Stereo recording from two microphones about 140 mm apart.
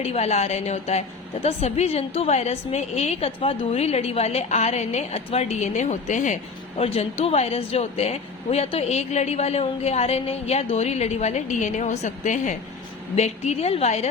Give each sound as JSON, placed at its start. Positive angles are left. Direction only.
{"t": 0.0, "sound": "a woman's voice", "side_deg": 45}